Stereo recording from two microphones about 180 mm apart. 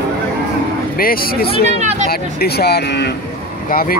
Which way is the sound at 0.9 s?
55° left (ahead or behind).